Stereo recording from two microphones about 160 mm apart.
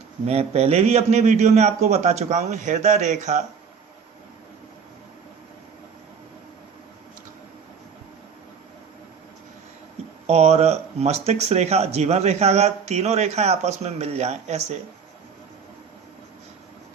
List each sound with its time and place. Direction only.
0.3 s speech: 40° right (ahead or behind)
10.2 s speech: 40° right (ahead or behind)